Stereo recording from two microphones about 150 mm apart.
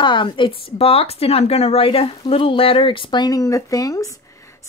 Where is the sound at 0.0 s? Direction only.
35° left (ahead or behind).